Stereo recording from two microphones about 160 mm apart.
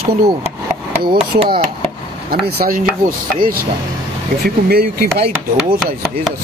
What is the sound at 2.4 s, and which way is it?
Speech, 65° right (ahead or behind).